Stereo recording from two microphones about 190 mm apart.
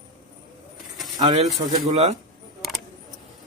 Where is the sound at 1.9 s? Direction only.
35° right (ahead or behind).